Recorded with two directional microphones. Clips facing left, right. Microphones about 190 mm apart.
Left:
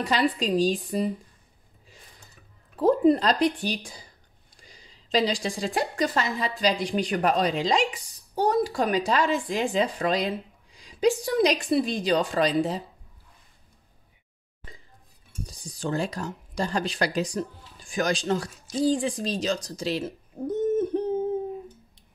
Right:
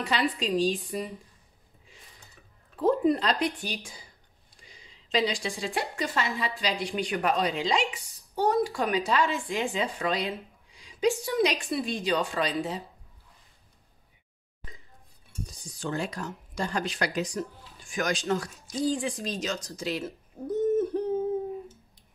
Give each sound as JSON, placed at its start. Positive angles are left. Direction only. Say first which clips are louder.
{"t": 0.0, "sound": "a woman's voice", "louder": "left 4 dB", "side_deg": 40}
{"t": 2.8, "sound": "a woman's voice", "louder": "left 4 dB", "side_deg": 35}
{"t": 15.4, "sound": "speech", "louder": "left 3 dB", "side_deg": 35}
{"t": 20.1, "sound": "a sound", "louder": "left 3 dB", "side_deg": 20}